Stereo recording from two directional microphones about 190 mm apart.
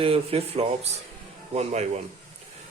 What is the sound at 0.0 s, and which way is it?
Speech, 30° right (ahead or behind).